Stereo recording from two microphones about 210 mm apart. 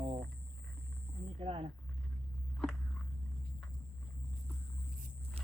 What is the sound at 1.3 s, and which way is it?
Speech, 25° right (ahead or behind).